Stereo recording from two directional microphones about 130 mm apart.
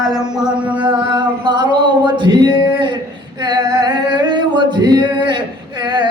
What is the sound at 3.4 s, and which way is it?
Singing, 30° right (ahead or behind).